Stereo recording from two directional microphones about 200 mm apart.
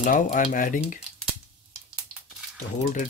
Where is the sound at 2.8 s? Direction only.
40° left (ahead or behind).